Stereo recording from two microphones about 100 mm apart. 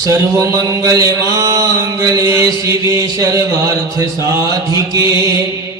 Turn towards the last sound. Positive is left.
turn(degrees=-35)  # may be behind; listen again after turning